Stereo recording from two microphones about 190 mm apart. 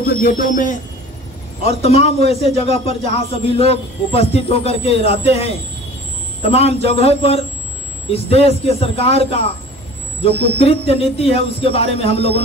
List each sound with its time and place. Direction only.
0.0 s speech: 50° left (ahead or behind)
1.6 s speech: 35° left (ahead or behind)